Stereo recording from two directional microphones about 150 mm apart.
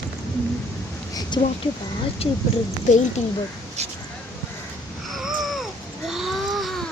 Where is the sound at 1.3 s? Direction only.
30° left (ahead or behind).